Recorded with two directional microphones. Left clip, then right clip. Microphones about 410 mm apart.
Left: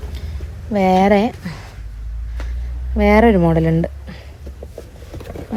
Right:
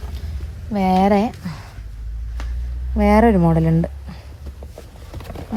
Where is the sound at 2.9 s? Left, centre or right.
Centre.